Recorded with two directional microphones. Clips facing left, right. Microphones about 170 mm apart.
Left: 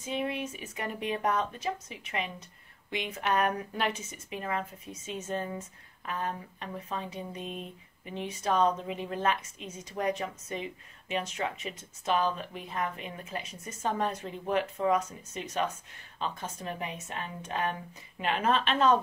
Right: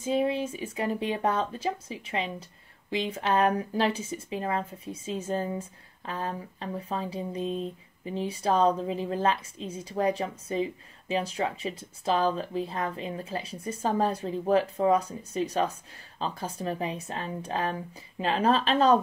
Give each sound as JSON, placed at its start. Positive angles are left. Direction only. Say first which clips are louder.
{"t": 0.0, "sound": "speech", "louder": "right 7 dB", "side_deg": -30}